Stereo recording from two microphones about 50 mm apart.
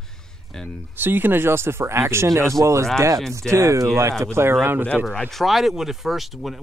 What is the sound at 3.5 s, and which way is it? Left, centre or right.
Speech, right.